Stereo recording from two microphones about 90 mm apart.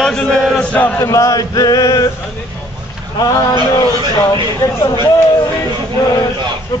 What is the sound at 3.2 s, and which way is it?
Speech, 45° left (ahead or behind).